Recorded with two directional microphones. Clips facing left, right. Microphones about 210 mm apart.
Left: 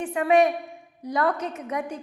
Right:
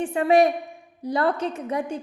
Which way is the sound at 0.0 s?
30° right (ahead or behind).